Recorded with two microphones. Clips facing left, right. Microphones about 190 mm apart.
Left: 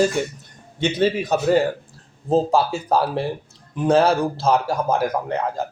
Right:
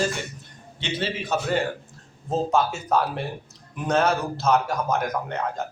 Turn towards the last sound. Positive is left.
turn(degrees=30)  # may be behind; listen again after turning